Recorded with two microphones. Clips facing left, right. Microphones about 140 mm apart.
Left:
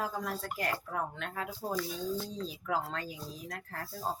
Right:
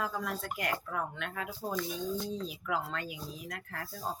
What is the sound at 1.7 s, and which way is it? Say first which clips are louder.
Speech: even; 20° right (ahead or behind).